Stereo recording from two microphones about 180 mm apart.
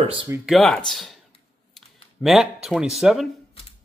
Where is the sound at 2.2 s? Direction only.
Centre (ahead or behind).